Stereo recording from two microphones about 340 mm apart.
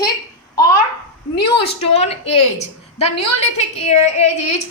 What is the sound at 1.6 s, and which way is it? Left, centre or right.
A woman's voice, centre.